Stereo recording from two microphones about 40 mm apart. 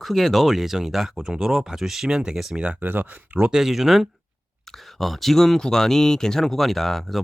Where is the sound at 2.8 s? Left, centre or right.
Right.